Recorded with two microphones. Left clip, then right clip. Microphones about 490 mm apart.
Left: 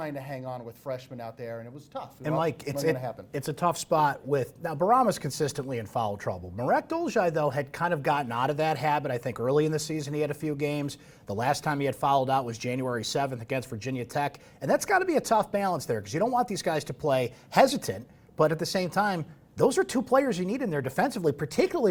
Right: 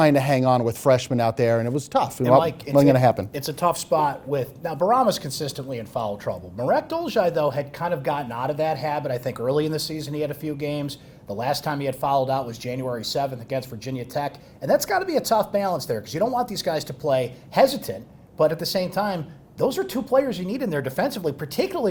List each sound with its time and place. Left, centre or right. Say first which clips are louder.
0.0 s speech: right 17 dB; right
2.2 s speech: right 8 dB; left
2.9 s speech: right 14 dB; right
3.3 s speech: right 5 dB; left